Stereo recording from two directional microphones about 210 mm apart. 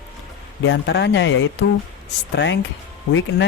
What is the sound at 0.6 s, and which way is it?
Speech, 60° left (ahead or behind).